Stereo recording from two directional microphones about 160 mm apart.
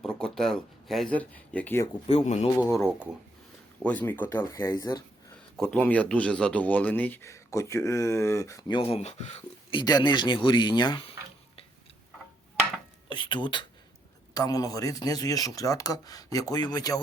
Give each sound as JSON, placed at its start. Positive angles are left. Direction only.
{"t": 0.0, "sound": "speech", "side_deg": 5}
{"t": 2.0, "sound": "speech", "side_deg": 40}
{"t": 2.6, "sound": "speech", "side_deg": 0}
{"t": 3.8, "sound": "speech", "side_deg": 10}
{"t": 4.5, "sound": "speech", "side_deg": 25}
{"t": 5.5, "sound": "speech", "side_deg": 5}
{"t": 9.7, "sound": "speech", "side_deg": 25}
{"t": 13.1, "sound": "speech", "side_deg": 30}